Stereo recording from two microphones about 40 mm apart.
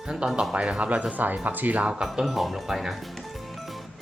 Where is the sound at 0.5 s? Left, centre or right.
Right.